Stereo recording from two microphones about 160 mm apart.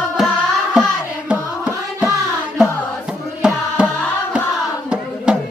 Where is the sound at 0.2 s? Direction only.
Centre (ahead or behind).